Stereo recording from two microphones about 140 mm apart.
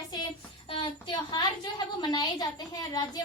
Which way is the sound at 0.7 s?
35° left (ahead or behind).